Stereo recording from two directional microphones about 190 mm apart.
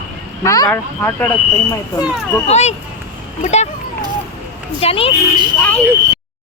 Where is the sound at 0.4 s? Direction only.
15° left (ahead or behind).